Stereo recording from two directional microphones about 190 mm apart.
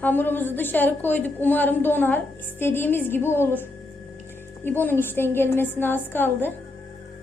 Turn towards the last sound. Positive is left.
turn(degrees=10)  # may be behind; listen again after turning